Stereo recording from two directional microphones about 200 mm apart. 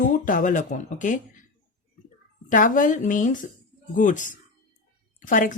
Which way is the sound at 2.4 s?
40° left (ahead or behind).